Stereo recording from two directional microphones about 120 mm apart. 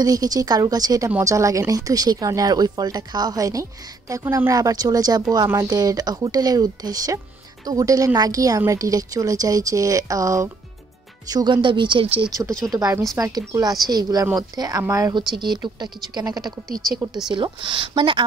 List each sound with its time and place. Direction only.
0.0 s a woman's voice: 30° right (ahead or behind)
11.2 s speech: 35° right (ahead or behind)
12.3 s a woman's voice: 30° right (ahead or behind)
15.1 s speech: 35° right (ahead or behind)